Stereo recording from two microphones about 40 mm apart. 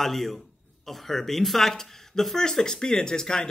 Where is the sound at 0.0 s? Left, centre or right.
Centre.